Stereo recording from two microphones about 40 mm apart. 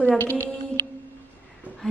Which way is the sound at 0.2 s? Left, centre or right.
Left.